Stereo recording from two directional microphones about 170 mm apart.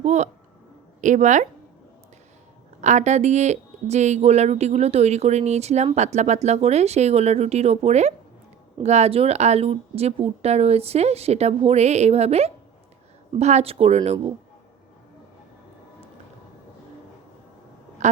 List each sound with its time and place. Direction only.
0.0 s a woman's voice: 40° right (ahead or behind)
2.8 s speech: 45° right (ahead or behind)
18.0 s quack: 45° right (ahead or behind)